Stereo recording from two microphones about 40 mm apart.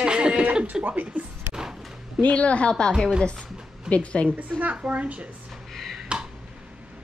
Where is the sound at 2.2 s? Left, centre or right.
Left.